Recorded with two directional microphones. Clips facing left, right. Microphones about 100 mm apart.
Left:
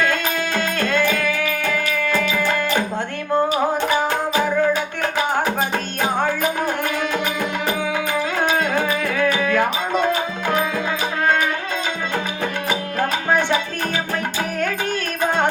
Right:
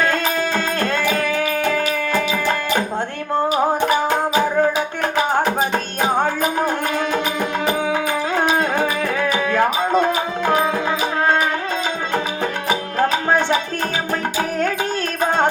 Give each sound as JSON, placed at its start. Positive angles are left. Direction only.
{"t": 0.0, "sound": "music", "side_deg": -35}
{"t": 8.8, "sound": "music", "side_deg": -25}